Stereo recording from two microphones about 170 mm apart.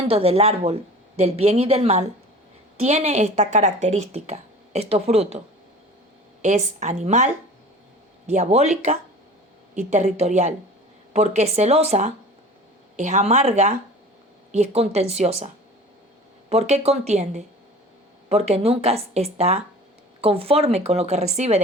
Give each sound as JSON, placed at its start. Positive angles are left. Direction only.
{"t": 0.1, "sound": "speech", "side_deg": -35}
{"t": 6.4, "sound": "speech", "side_deg": -45}
{"t": 8.3, "sound": "speech", "side_deg": -40}